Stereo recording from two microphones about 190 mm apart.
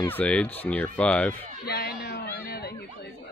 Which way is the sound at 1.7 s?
60° left (ahead or behind).